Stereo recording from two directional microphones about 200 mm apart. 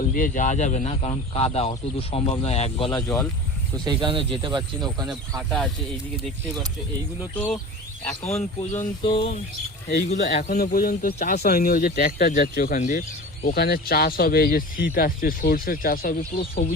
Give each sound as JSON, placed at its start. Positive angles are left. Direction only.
{"t": 0.1, "sound": "speech", "side_deg": 40}
{"t": 3.8, "sound": "speech", "side_deg": -25}
{"t": 5.4, "sound": "speech", "side_deg": 0}
{"t": 8.2, "sound": "speech", "side_deg": 30}
{"t": 10.5, "sound": "speech", "side_deg": 50}